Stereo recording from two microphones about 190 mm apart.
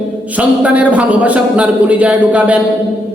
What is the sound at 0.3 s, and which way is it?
Speech, 5° right (ahead or behind).